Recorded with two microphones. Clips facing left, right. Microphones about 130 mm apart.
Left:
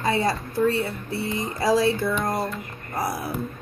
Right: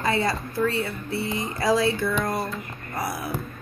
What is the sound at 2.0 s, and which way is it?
A woman's voice, 20° left (ahead or behind).